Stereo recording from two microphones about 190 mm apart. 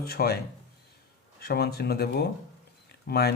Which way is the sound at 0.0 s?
55° left (ahead or behind).